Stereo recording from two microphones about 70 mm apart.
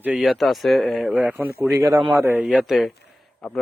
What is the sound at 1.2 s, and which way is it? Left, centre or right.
Speech, right.